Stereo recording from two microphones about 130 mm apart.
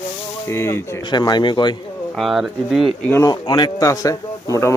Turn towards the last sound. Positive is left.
turn(degrees=25)  # may be behind; listen again after turning